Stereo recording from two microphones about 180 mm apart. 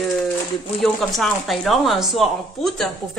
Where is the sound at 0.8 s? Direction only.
Centre (ahead or behind).